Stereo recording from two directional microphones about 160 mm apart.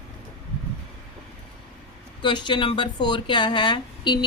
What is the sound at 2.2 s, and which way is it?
Speech, 30° left (ahead or behind).